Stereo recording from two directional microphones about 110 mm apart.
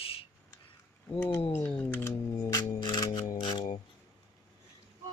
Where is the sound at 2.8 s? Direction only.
45° left (ahead or behind).